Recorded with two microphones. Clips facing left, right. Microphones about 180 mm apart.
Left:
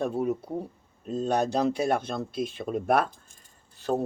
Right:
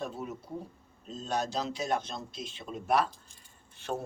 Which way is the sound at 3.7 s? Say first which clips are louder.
Left 8 dB; 35° left (ahead or behind).